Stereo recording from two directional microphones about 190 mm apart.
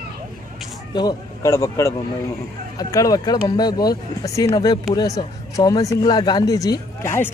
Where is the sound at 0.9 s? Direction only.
20° left (ahead or behind).